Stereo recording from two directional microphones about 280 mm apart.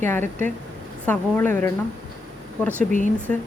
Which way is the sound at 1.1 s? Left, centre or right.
Centre.